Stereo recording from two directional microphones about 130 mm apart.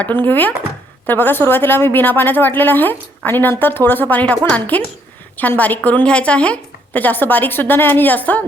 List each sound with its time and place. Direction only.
0.0 s a woman's voice: 15° left (ahead or behind)